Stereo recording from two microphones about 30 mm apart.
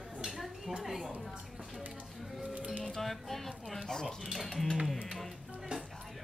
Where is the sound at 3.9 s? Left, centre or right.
Centre.